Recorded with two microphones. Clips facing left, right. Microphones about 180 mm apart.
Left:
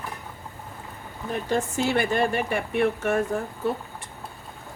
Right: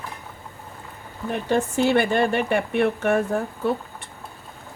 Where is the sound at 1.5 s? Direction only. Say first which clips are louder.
Right 5 dB; 65° right (ahead or behind).